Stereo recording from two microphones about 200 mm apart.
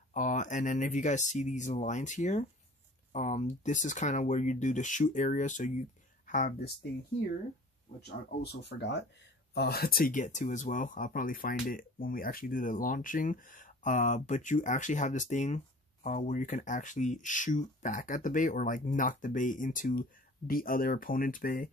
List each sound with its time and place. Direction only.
0.1 s speech: 40° left (ahead or behind)
8.4 s speech: 60° left (ahead or behind); by 21.6 s 45° left (ahead or behind)